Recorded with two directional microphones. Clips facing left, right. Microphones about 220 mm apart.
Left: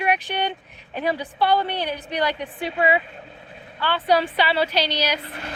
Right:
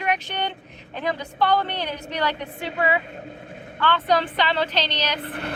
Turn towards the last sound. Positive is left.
turn(degrees=-55)  # may be behind; listen again after turning